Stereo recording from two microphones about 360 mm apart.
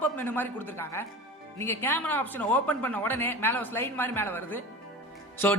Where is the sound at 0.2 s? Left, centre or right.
Centre.